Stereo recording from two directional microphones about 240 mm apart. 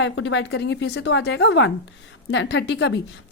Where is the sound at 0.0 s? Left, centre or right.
Left.